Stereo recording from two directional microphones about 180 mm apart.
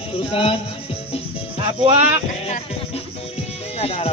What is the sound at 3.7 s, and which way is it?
Music, 35° left (ahead or behind).